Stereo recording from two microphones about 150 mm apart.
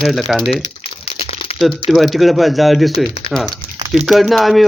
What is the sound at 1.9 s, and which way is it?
Speech, centre (ahead or behind).